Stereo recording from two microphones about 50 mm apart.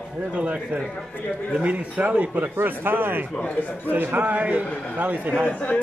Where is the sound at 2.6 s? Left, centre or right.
Right.